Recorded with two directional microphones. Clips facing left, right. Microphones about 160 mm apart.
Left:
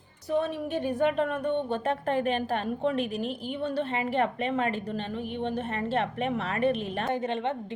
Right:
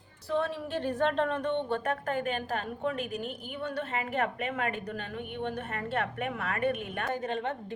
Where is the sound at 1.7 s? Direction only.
25° left (ahead or behind).